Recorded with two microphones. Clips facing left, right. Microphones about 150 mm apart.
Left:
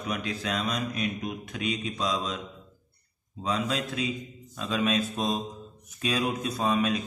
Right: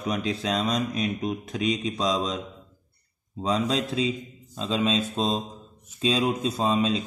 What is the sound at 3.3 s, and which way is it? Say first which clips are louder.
A man's voice: right 4 dB; 30° right (ahead or behind).